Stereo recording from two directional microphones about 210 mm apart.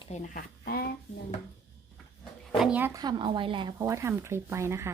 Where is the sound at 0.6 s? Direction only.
45° left (ahead or behind).